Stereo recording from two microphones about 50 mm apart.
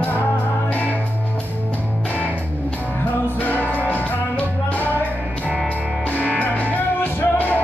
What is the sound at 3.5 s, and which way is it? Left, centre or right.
Music, right.